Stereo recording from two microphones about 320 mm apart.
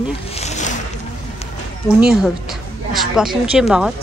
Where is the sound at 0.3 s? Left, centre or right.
Left.